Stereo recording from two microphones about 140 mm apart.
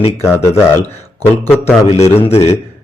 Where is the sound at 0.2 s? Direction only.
20° left (ahead or behind).